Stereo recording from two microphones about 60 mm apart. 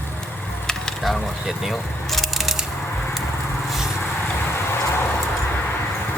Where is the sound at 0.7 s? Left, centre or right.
Centre.